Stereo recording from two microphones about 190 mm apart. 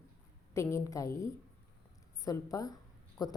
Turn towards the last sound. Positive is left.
turn(degrees=20)  # may be behind; listen again after turning